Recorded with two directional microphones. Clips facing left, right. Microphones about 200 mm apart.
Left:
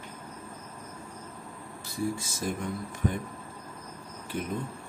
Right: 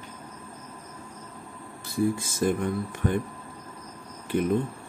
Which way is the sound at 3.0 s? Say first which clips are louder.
Right 4 dB; 60° right (ahead or behind).